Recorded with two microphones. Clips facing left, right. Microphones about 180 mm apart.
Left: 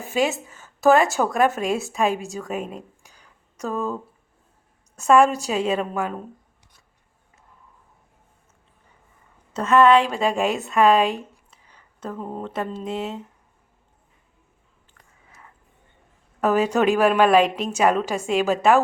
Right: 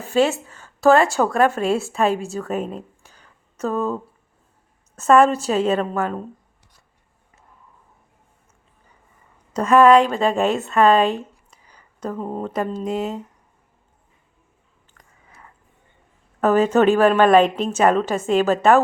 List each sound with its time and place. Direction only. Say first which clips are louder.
0.0 s a woman's voice: right 4 dB; 15° left (ahead or behind)
2.6 s speech: right 4 dB; 35° right (ahead or behind)
3.0 s a sound: right 2 dB; 15° left (ahead or behind)
3.7 s speech: right 3 dB; centre (ahead or behind)
4.9 s a woman's voice: right 2 dB; 10° left (ahead or behind)
9.6 s a woman's voice: right 3 dB; centre (ahead or behind)
11.6 s a sound: right 4 dB; centre (ahead or behind)
12.4 s speech: right 4 dB; centre (ahead or behind)
16.4 s a woman's voice: right 4 dB; 10° left (ahead or behind)